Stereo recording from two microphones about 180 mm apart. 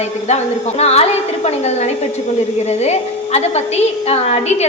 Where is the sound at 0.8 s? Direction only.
35° left (ahead or behind).